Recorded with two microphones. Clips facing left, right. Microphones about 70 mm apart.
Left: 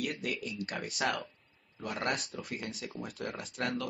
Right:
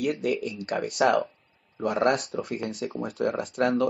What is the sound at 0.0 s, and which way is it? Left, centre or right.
Speech, right.